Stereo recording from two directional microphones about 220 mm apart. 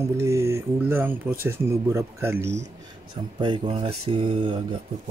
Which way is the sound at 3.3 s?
20° right (ahead or behind).